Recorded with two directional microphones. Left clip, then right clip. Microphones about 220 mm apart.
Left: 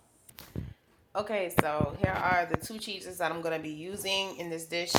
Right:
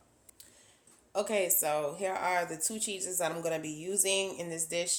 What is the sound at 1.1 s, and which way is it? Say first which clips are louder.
A woman's voice: left 2 dB; 15° right (ahead or behind).